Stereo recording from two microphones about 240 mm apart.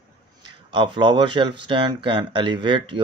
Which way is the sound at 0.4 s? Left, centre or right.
Centre.